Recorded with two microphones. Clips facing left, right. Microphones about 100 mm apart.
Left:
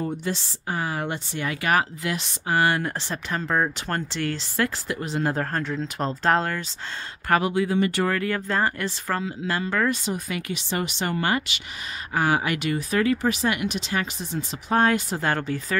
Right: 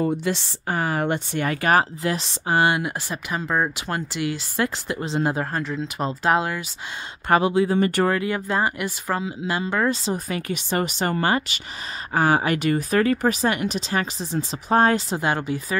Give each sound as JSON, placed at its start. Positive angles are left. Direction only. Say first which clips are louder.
{"t": 0.2, "sound": "speech", "louder": "right 4 dB", "side_deg": -65}
{"t": 2.8, "sound": "speech", "louder": "right 1 dB", "side_deg": -10}
{"t": 5.3, "sound": "speech", "louder": "right 1 dB", "side_deg": -10}
{"t": 7.2, "sound": "speech", "louder": "right 3 dB", "side_deg": -25}
{"t": 7.7, "sound": "speech", "louder": "right 3 dB", "side_deg": -45}
{"t": 8.1, "sound": "speech", "louder": "right 2 dB", "side_deg": -15}
{"t": 15.1, "sound": "speech", "louder": "right 2 dB", "side_deg": -15}